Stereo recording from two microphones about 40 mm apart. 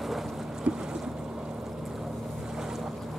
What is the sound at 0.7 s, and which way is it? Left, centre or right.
Boat, right.